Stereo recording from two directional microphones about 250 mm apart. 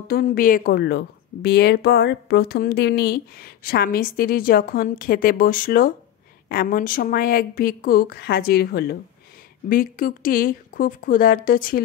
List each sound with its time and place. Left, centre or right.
0.1 s a woman's voice: left